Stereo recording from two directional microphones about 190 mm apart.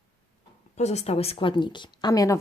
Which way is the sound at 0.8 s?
35° left (ahead or behind).